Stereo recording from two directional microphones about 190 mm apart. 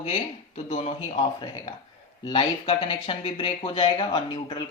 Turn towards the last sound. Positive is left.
turn(degrees=25)  # may be behind; listen again after turning